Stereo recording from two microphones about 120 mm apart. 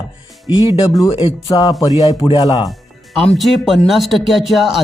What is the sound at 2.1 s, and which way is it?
Speech, 45° left (ahead or behind).